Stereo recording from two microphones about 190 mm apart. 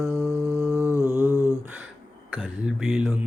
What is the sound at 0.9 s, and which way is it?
Mantra, 15° left (ahead or behind).